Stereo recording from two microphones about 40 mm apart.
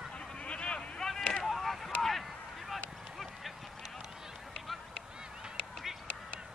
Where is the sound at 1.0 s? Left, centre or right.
Centre.